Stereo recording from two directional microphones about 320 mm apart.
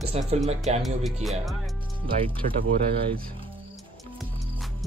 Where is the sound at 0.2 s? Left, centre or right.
Centre.